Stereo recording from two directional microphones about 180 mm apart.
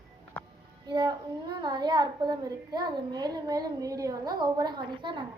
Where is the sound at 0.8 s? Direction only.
25° right (ahead or behind).